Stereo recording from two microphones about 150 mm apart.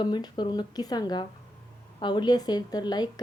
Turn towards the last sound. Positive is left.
turn(degrees=30)  # may be behind; listen again after turning